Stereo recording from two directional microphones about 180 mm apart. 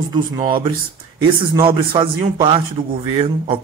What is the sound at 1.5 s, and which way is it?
A man's voice, 25° right (ahead or behind).